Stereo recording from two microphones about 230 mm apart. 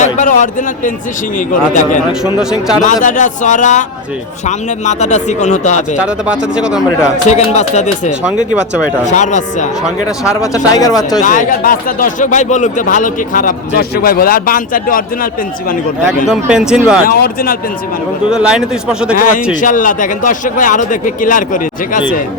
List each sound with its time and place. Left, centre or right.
0.0 s speech: left
2.4 s a man's voice: centre
2.8 s speech: left
6.0 s a man's voice: centre
7.3 s speech: left
10.5 s speech: centre
11.2 s speech: left
16.3 s a man's voice: centre
17.1 s speech: left
18.3 s a man's voice: centre
19.1 s speech: left